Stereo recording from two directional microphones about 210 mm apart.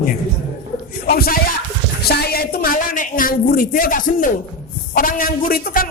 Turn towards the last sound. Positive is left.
turn(degrees=40)  # may be behind; listen again after turning